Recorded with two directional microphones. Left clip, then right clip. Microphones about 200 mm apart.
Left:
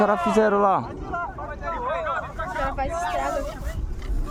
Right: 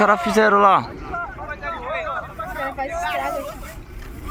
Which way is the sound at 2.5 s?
10° right (ahead or behind).